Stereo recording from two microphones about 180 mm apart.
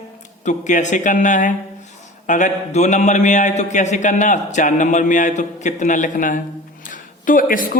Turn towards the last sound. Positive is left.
turn(degrees=50)  # may be behind; listen again after turning